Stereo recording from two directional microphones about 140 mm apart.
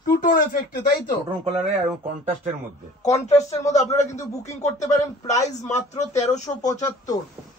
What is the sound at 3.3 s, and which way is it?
Speech, 50° left (ahead or behind).